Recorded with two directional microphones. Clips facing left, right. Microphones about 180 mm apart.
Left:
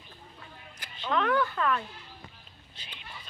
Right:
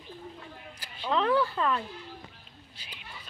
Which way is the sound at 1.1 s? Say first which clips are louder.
Right 1 dB; 30° right (ahead or behind).